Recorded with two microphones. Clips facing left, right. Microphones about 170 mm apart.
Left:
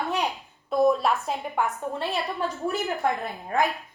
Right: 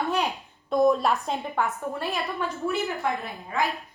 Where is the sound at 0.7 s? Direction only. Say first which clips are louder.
Even; centre (ahead or behind).